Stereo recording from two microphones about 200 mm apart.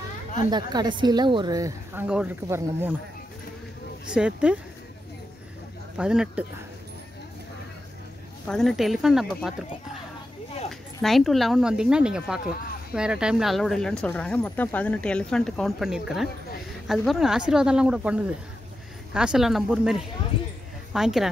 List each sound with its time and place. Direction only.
0.5 s a woman's voice: 20° right (ahead or behind)
2.0 s a woman's voice: 5° right (ahead or behind)
4.1 s a woman's voice: 5° right (ahead or behind)
5.9 s a woman's voice: 5° right (ahead or behind)
8.5 s a woman's voice: centre (ahead or behind)
10.7 s a woman's voice: centre (ahead or behind)
20.3 s speech: 25° left (ahead or behind)
20.9 s a woman's voice: centre (ahead or behind)